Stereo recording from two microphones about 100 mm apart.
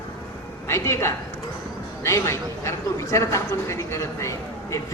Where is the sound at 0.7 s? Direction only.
30° left (ahead or behind).